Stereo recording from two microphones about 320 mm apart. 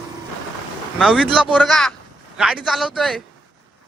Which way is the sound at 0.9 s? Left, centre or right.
Centre.